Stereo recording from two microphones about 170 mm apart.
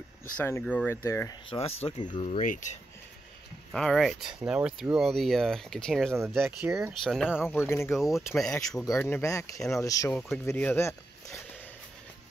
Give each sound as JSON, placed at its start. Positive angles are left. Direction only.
{"t": 0.4, "sound": "speech", "side_deg": 10}
{"t": 1.5, "sound": "speech", "side_deg": 35}
{"t": 2.2, "sound": "speech", "side_deg": 45}
{"t": 3.7, "sound": "speech", "side_deg": 0}
{"t": 6.4, "sound": "speech", "side_deg": -5}
{"t": 7.4, "sound": "speech", "side_deg": 15}
{"t": 7.9, "sound": "speech", "side_deg": 0}
{"t": 8.8, "sound": "speech", "side_deg": 15}
{"t": 10.1, "sound": "speech", "side_deg": 0}
{"t": 10.4, "sound": "speech", "side_deg": 15}